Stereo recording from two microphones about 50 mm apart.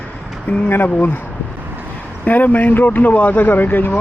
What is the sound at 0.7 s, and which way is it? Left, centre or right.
Speech, left.